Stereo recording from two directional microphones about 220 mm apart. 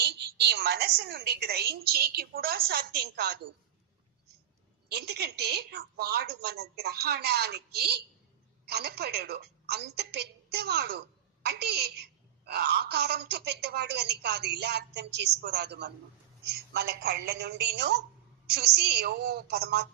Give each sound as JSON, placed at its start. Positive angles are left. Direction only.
{"t": 0.0, "sound": "a woman's voice", "side_deg": -50}
{"t": 4.9, "sound": "a woman's voice", "side_deg": -50}